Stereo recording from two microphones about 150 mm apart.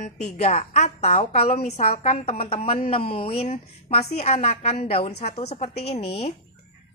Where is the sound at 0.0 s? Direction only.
50° left (ahead or behind).